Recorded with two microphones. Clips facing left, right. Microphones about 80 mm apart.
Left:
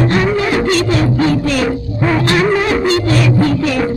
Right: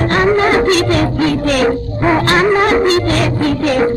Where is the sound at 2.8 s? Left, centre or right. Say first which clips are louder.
Right 1 dB; right.